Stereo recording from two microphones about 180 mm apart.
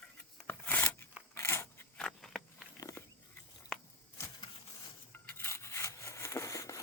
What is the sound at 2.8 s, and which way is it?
Biting, 15° left (ahead or behind).